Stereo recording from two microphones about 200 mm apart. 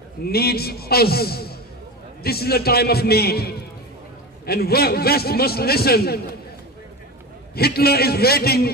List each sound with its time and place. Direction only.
0.2 s a man's voice: 50° left (ahead or behind)
7.5 s a man's voice: 50° left (ahead or behind)